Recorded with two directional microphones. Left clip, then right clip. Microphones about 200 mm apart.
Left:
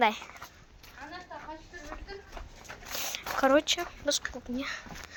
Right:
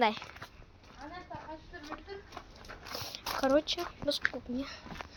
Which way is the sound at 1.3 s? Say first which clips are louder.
Left 2 dB; 55° left (ahead or behind).